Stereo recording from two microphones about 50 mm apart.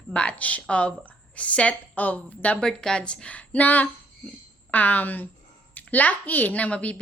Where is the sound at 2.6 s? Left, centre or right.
Centre.